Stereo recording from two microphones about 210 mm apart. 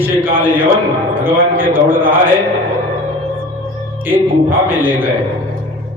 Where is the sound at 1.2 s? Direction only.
10° right (ahead or behind).